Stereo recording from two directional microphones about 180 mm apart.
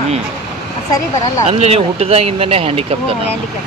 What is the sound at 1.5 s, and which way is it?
Speech, 35° right (ahead or behind).